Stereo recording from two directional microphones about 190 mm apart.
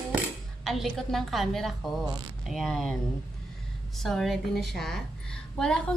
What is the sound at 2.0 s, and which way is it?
Speech, 20° right (ahead or behind).